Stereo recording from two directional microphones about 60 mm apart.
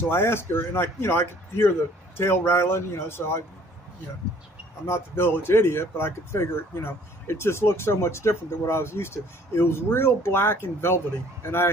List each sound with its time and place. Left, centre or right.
0.1 s speech: left
4.8 s speech: left